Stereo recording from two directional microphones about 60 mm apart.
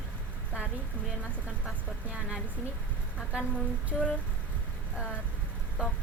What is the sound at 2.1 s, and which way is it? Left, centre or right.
Speech, centre.